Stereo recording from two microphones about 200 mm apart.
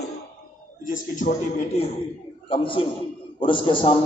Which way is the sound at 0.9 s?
40° left (ahead or behind).